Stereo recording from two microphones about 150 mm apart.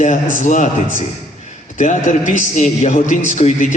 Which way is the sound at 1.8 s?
55° left (ahead or behind).